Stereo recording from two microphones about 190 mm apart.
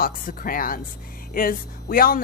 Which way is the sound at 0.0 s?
50° left (ahead or behind).